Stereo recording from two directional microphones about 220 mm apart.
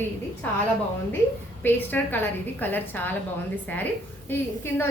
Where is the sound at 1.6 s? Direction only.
10° left (ahead or behind).